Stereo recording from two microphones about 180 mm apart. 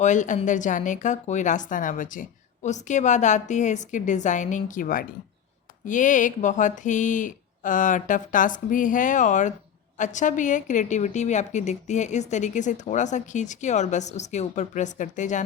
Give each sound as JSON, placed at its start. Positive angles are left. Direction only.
{"t": 0.0, "sound": "a woman's voice", "side_deg": 45}